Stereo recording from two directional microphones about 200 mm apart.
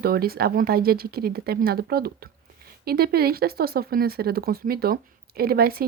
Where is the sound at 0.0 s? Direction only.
50° right (ahead or behind).